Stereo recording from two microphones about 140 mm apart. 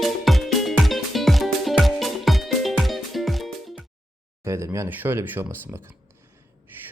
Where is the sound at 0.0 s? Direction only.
Centre (ahead or behind).